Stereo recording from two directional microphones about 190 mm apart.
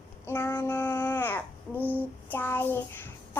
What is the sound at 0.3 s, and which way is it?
Child singing, 15° left (ahead or behind).